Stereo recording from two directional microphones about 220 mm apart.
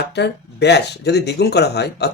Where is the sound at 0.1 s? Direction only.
50° left (ahead or behind).